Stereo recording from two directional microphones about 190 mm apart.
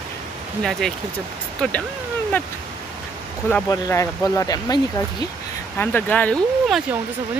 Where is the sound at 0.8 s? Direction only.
Centre (ahead or behind).